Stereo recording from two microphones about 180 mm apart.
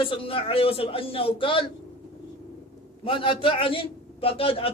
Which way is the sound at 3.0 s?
30° left (ahead or behind).